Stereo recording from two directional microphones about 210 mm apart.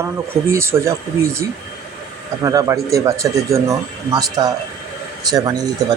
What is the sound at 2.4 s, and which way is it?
Speech, 15° right (ahead or behind).